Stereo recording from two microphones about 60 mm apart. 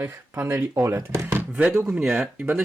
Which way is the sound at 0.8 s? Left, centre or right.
Right.